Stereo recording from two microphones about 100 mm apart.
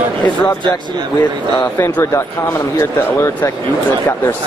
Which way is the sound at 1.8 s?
25° left (ahead or behind).